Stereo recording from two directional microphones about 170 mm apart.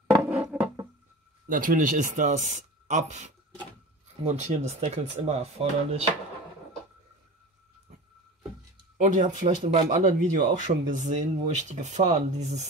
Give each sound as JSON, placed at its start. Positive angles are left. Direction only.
{"t": 0.3, "sound": "a sound", "side_deg": -5}
{"t": 1.5, "sound": "speech", "side_deg": -55}
{"t": 8.9, "sound": "speech", "side_deg": -50}